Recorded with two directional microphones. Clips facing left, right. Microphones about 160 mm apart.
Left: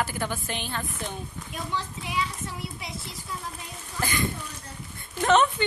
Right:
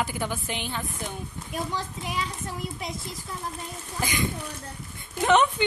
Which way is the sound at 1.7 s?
45° right (ahead or behind).